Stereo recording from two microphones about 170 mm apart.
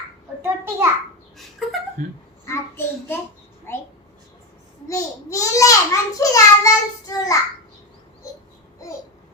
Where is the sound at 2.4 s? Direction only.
15° left (ahead or behind).